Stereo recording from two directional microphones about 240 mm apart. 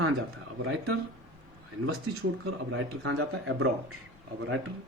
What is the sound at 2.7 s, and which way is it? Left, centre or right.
Speech, right.